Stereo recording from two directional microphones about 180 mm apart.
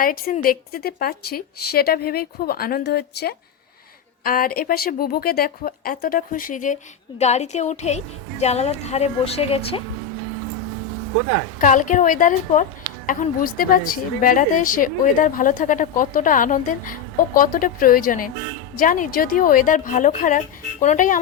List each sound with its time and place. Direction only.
0.0 s a woman's voice: 50° left (ahead or behind)
4.2 s a woman's voice: 50° left (ahead or behind); by 9.8 s 30° left (ahead or behind)
11.6 s a woman's voice: 45° left (ahead or behind)